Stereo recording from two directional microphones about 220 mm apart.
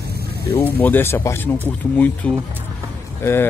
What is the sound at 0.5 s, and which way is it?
Speech, 10° left (ahead or behind).